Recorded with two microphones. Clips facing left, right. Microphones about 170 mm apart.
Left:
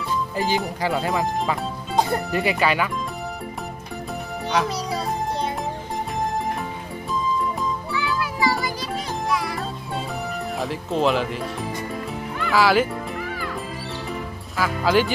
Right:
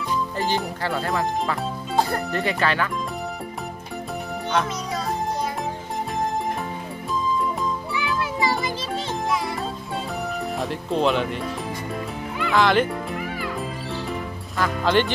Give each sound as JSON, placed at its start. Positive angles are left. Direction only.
{"t": 0.4, "sound": "speech", "side_deg": 5}
{"t": 1.0, "sound": "speech", "side_deg": 15}
{"t": 7.9, "sound": "music", "side_deg": -20}
{"t": 10.6, "sound": "speech", "side_deg": 0}
{"t": 12.4, "sound": "speech", "side_deg": 5}
{"t": 14.6, "sound": "speech", "side_deg": 5}